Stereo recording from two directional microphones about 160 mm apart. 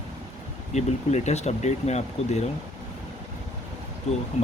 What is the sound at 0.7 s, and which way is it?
Speech, 45° left (ahead or behind).